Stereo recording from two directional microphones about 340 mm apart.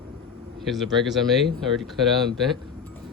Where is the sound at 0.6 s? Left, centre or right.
Centre.